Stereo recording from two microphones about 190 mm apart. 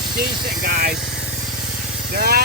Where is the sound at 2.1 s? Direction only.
50° right (ahead or behind).